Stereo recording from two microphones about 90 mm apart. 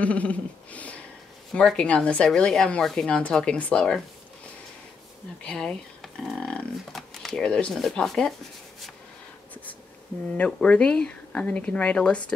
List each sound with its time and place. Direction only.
0.0 s a sound: 15° left (ahead or behind)
1.5 s speech: 10° left (ahead or behind)
5.4 s speech: 10° left (ahead or behind)
10.3 s speech: 15° left (ahead or behind)